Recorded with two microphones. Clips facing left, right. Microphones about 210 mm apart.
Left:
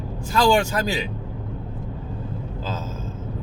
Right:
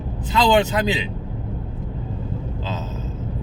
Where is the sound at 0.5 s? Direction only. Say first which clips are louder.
Right 3 dB; 20° right (ahead or behind).